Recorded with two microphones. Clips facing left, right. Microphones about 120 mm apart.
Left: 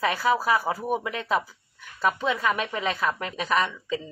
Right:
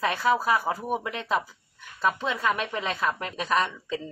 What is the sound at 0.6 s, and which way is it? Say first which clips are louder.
Speech: left 1 dB; 15° left (ahead or behind).